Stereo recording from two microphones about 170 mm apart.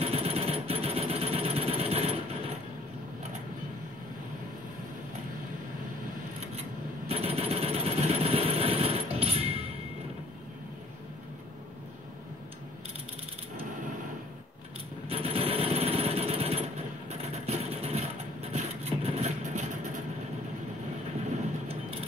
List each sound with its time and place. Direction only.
0.0 s jackhammer: 35° right (ahead or behind)
7.1 s jackhammer: 35° right (ahead or behind)
15.0 s jackhammer: 35° right (ahead or behind)
17.3 s vehicle: 35° right (ahead or behind)